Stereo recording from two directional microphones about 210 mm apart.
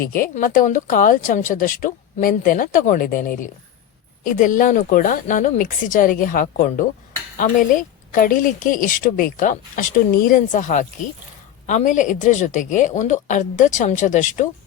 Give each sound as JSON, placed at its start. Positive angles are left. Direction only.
{"t": 0.0, "sound": "a woman's voice", "side_deg": 40}